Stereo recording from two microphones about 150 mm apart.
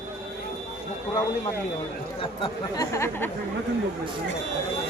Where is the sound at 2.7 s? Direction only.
20° left (ahead or behind).